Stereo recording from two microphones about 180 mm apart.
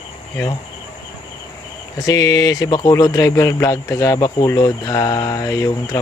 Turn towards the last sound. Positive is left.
turn(degrees=20)  # may be behind; listen again after turning